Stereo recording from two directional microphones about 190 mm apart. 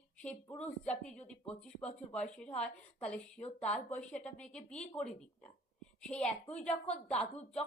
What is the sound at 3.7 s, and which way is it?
Speech, 5° left (ahead or behind).